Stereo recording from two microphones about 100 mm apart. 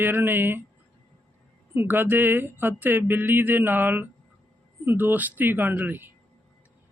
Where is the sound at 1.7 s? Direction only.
20° right (ahead or behind).